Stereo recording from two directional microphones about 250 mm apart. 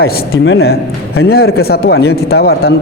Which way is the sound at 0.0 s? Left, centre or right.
Left.